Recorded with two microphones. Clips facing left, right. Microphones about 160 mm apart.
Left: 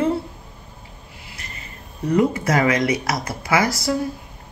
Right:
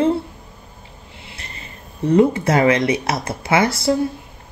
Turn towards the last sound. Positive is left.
turn(degrees=-30)  # may be behind; listen again after turning